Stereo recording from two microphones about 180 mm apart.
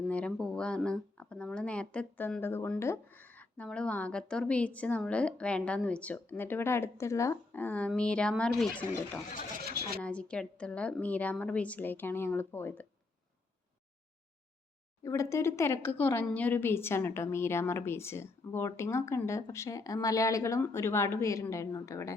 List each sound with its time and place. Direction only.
0.1 s speech: 5° left (ahead or behind)
9.6 s speech: 60° right (ahead or behind)
10.0 s speech: 5° left (ahead or behind)
15.0 s speech: 15° left (ahead or behind)